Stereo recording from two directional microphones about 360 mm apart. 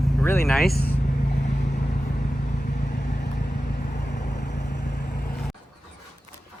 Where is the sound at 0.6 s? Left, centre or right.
Left.